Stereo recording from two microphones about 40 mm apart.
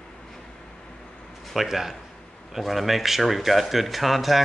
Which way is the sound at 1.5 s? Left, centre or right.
Centre.